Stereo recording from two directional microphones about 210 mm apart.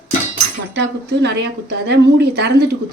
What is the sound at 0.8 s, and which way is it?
Speech, 55° right (ahead or behind).